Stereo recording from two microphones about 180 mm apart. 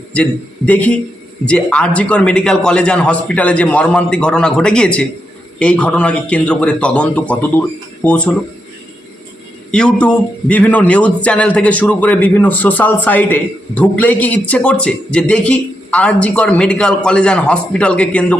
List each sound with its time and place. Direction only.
0.1 s a man's voice: 5° left (ahead or behind)
9.7 s a man's voice: 5° left (ahead or behind)